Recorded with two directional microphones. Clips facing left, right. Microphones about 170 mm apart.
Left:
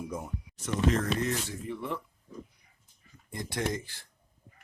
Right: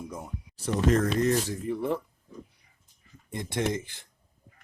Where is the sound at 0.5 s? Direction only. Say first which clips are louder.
Right 4 dB; 40° right (ahead or behind).